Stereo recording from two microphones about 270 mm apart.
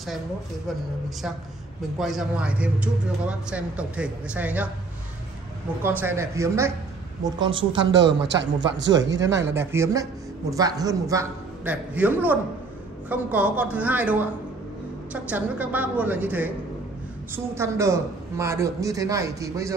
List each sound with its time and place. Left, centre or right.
2.0 s a man's voice: centre
5.8 s a man's voice: centre
7.8 s speech: right
9.5 s a man's voice: centre
17.6 s a man's voice: centre